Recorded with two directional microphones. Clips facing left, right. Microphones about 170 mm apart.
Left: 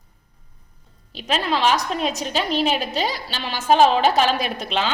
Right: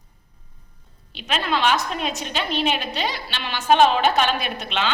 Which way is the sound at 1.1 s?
35° left (ahead or behind).